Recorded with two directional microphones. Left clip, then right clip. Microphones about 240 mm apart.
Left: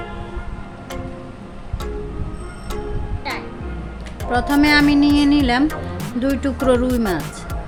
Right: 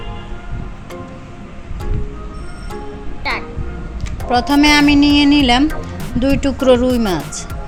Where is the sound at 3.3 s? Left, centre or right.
Right.